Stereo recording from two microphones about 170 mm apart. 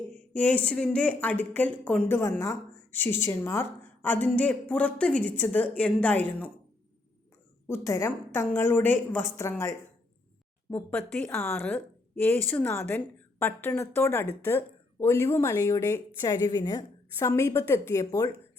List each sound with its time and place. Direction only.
0.3 s a woman's voice: 10° left (ahead or behind)
7.7 s a woman's voice: 15° left (ahead or behind)